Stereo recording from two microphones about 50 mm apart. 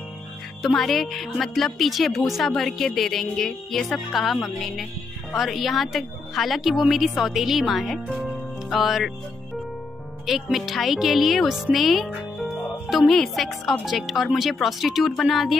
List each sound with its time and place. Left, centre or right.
0.7 s speech: centre
10.2 s speech: centre